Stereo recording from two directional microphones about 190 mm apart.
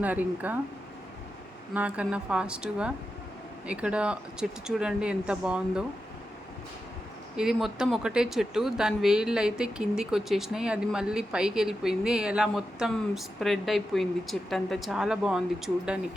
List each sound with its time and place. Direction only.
0.0 s speech: 10° right (ahead or behind)
1.7 s speech: 5° right (ahead or behind)
7.3 s speech: 5° right (ahead or behind)